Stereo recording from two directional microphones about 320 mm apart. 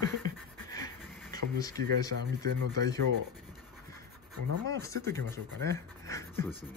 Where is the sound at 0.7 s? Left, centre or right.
Centre.